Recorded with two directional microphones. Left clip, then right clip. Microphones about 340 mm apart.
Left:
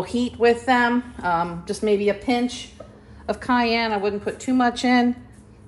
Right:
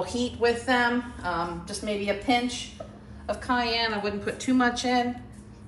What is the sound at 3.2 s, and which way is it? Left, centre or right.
A woman's voice, centre.